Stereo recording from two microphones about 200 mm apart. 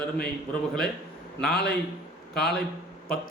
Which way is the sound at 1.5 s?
55° left (ahead or behind).